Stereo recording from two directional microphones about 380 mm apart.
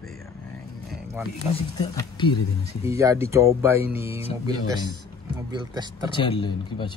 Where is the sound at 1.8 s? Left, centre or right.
Centre.